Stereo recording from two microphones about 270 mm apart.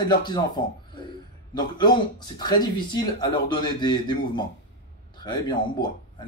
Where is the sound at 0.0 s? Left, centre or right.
Centre.